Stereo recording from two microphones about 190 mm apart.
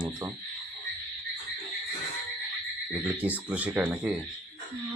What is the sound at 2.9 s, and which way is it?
Speech, 10° right (ahead or behind).